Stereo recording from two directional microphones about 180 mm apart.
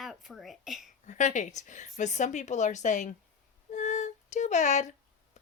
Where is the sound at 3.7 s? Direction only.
40° left (ahead or behind).